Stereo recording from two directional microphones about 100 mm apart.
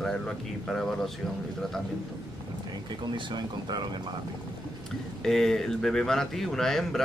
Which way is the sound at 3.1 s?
45° right (ahead or behind).